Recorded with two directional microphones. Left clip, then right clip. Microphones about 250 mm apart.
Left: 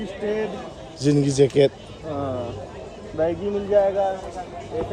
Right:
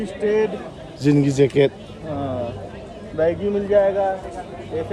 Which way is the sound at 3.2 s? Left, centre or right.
Right.